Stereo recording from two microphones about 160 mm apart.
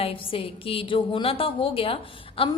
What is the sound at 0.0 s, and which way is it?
A woman's voice, 35° left (ahead or behind).